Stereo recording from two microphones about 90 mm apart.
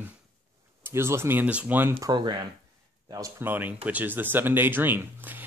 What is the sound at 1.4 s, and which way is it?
Speech, 15° right (ahead or behind).